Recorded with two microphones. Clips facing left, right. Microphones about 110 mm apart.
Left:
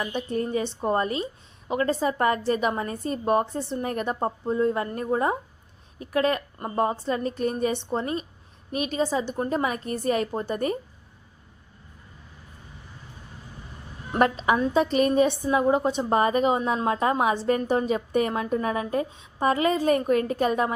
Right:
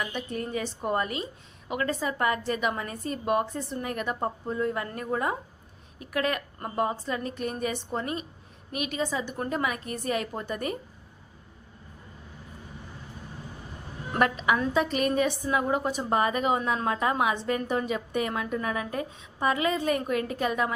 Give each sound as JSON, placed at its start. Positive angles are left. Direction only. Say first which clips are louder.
{"t": 0.0, "sound": "a woman's voice", "louder": "left 5 dB", "side_deg": 35}
{"t": 14.2, "sound": "a woman's voice", "louder": "left 3 dB", "side_deg": 35}